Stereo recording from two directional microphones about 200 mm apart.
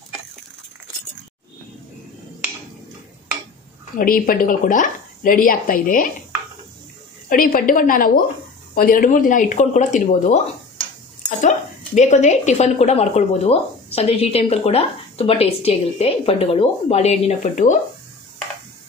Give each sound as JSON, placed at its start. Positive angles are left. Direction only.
{"t": 4.0, "sound": "speech", "side_deg": 45}
{"t": 7.2, "sound": "speech", "side_deg": 45}